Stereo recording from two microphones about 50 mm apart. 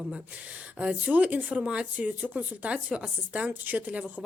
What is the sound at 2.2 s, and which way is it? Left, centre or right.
Speech, right.